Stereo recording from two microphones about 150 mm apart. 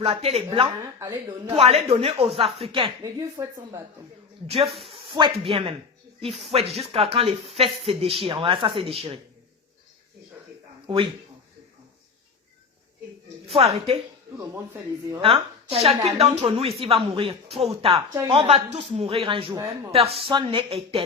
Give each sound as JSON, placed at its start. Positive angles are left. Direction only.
{"t": 0.0, "sound": "a woman's voice", "side_deg": -40}
{"t": 0.9, "sound": "speech", "side_deg": -25}
{"t": 1.5, "sound": "speech", "side_deg": -40}
{"t": 3.2, "sound": "speech", "side_deg": -20}
{"t": 4.4, "sound": "speech", "side_deg": -40}
{"t": 4.7, "sound": "speech", "side_deg": 0}
{"t": 4.9, "sound": "speech", "side_deg": -35}
{"t": 10.8, "sound": "speech", "side_deg": -35}
{"t": 13.5, "sound": "speech", "side_deg": -40}
{"t": 14.3, "sound": "speech", "side_deg": -20}
{"t": 15.2, "sound": "a woman's voice", "side_deg": -40}